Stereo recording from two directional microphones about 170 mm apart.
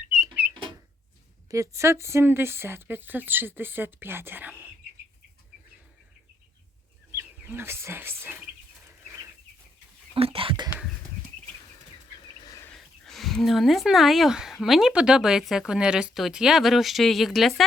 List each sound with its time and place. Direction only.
1.5 s speech: 20° right (ahead or behind)
7.2 s speech: 15° right (ahead or behind)
10.2 s whispering: 35° right (ahead or behind)
12.4 s bird: 20° left (ahead or behind)
12.7 s speech: centre (ahead or behind)